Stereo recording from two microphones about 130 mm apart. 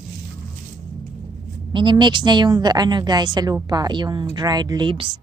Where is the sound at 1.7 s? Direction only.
35° right (ahead or behind).